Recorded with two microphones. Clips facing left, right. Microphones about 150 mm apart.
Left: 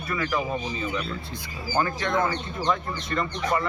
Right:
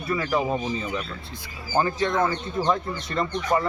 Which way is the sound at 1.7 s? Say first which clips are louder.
Right 2 dB; 25° right (ahead or behind).